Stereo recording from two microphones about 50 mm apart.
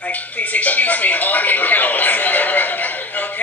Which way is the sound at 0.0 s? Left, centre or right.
Left.